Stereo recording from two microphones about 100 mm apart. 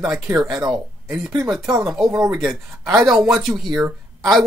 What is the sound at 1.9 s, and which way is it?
Speech, centre (ahead or behind).